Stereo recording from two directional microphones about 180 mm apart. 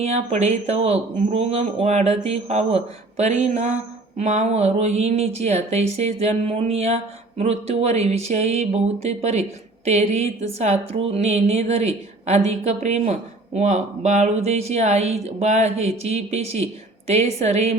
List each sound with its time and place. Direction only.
0.0 s speech: 35° right (ahead or behind)